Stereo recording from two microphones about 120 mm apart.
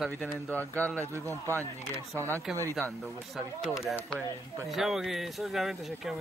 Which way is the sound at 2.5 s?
5° right (ahead or behind).